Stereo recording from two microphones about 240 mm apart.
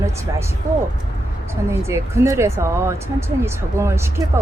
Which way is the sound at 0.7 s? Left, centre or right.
Right.